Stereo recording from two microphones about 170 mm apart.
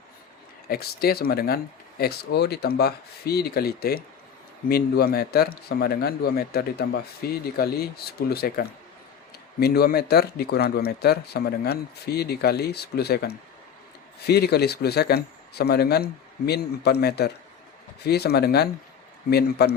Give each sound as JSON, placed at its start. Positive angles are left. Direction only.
{"t": 0.7, "sound": "speech", "side_deg": 65}